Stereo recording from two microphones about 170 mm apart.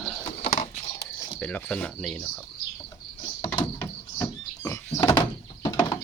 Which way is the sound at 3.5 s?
25° left (ahead or behind).